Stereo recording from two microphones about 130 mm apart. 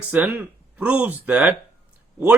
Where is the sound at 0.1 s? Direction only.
15° right (ahead or behind).